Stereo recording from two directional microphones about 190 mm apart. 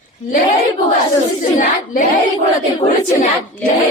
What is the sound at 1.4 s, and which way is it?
Speech, 45° left (ahead or behind).